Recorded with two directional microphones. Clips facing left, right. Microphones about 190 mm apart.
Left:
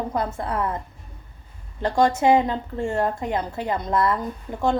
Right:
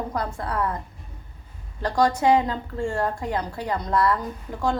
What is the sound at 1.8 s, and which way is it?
A woman's voice, 25° left (ahead or behind).